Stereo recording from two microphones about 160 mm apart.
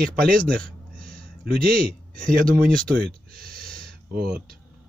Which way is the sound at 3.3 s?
70° right (ahead or behind).